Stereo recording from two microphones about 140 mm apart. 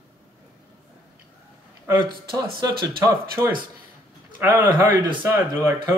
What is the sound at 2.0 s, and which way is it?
Speech, 30° right (ahead or behind).